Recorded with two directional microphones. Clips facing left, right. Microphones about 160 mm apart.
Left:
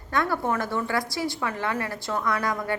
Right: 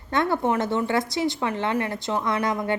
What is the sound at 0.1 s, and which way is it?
A woman's voice, 25° right (ahead or behind).